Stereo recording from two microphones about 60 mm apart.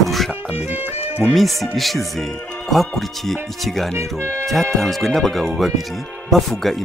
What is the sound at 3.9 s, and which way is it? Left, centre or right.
Speech, right.